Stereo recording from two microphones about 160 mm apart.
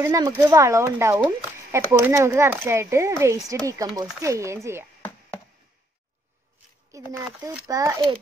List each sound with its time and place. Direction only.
0.0 s speech: 20° right (ahead or behind)
6.9 s speech: 20° right (ahead or behind)